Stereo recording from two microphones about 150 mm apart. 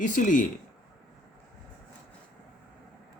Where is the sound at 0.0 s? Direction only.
60° left (ahead or behind).